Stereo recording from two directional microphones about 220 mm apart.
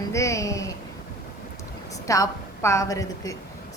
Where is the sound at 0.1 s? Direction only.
15° left (ahead or behind).